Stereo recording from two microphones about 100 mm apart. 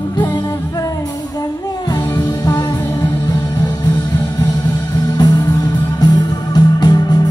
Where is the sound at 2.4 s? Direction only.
40° left (ahead or behind).